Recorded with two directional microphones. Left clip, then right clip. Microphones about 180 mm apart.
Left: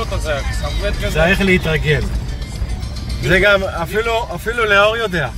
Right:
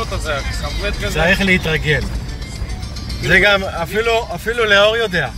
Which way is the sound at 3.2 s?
55° left (ahead or behind).